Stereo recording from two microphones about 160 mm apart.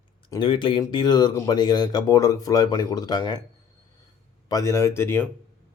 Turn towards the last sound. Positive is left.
turn(degrees=15)  # may be behind; listen again after turning